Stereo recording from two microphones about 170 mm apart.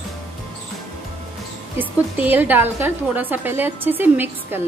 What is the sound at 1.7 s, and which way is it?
A woman's voice, 10° right (ahead or behind).